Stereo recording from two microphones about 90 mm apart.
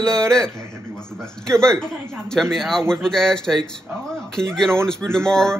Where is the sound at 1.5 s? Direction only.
5° left (ahead or behind).